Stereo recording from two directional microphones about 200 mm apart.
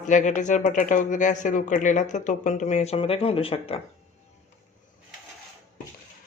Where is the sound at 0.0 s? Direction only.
40° left (ahead or behind).